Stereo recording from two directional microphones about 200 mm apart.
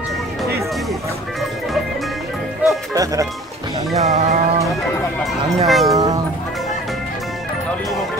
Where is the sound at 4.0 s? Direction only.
35° right (ahead or behind).